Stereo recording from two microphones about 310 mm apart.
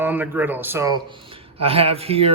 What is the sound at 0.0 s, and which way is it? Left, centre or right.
Speech, centre.